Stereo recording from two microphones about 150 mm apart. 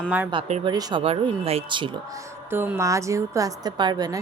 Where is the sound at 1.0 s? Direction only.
40° right (ahead or behind).